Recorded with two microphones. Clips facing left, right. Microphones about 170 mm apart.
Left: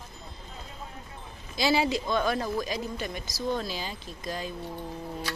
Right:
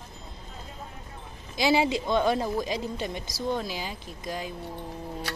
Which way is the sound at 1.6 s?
20° right (ahead or behind).